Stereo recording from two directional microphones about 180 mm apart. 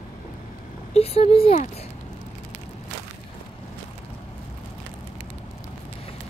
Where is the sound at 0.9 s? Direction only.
35° left (ahead or behind).